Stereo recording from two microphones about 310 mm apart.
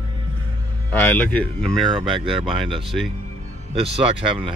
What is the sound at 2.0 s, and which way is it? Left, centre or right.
Speech, centre.